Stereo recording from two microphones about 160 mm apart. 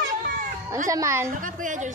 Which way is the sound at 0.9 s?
20° right (ahead or behind).